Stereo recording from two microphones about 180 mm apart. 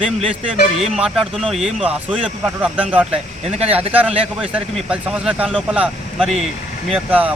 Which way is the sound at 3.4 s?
35° right (ahead or behind).